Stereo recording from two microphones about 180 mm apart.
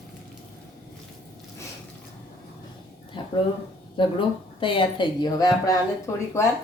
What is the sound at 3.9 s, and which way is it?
Speech, 25° left (ahead or behind).